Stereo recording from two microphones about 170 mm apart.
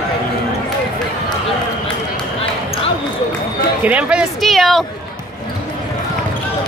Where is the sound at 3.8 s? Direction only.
10° right (ahead or behind).